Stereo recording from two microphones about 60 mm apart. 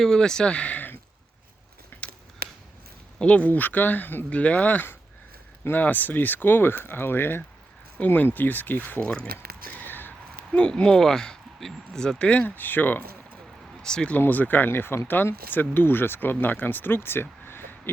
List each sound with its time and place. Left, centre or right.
0.0 s speech: centre; by 0.9 s left
1.9 s a sound: left
3.2 s speech: left
9.0 s speech: centre
9.6 s a sound: left
10.5 s speech: centre
13.8 s speech: centre
14.2 s speech: left